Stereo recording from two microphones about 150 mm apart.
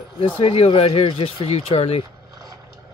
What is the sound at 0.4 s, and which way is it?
Speech, 35° left (ahead or behind).